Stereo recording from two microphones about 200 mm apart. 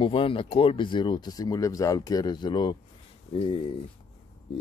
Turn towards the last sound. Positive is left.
turn(degrees=25)  # may be behind; listen again after turning